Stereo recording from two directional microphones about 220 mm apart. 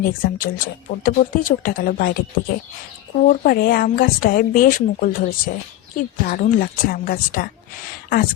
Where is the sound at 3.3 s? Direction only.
40° left (ahead or behind).